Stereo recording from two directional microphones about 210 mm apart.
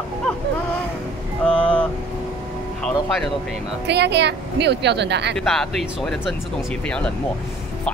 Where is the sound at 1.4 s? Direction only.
5° left (ahead or behind).